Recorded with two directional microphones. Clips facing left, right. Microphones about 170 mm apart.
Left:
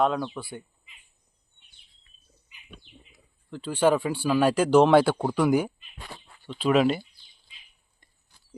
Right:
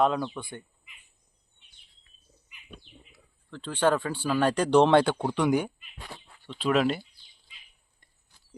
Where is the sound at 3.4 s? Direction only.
10° left (ahead or behind).